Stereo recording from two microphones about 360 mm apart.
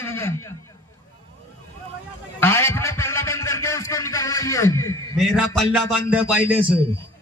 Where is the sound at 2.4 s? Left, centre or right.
Centre.